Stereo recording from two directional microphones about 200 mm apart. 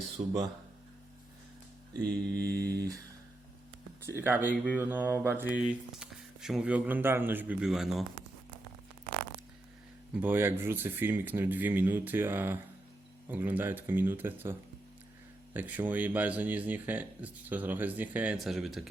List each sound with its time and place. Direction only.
2.3 s speech: 15° right (ahead or behind)
4.0 s speech: 10° right (ahead or behind)
4.5 s speech: 5° left (ahead or behind)
4.8 s speech: 10° right (ahead or behind)
10.2 s speech: 10° right (ahead or behind)
15.5 s speech: 10° right (ahead or behind)